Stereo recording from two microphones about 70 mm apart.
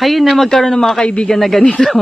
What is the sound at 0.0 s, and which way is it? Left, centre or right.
Speech, centre.